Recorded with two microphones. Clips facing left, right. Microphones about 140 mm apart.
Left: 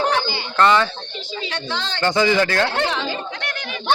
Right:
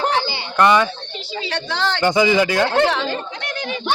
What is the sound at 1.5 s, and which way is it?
Speech, 75° right (ahead or behind).